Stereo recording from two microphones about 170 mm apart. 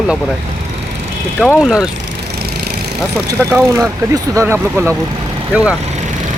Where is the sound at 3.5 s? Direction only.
10° right (ahead or behind).